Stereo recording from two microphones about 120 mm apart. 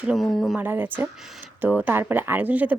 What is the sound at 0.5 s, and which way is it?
Speech, 15° right (ahead or behind).